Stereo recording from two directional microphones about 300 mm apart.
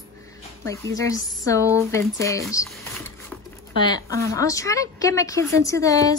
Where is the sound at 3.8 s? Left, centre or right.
Centre.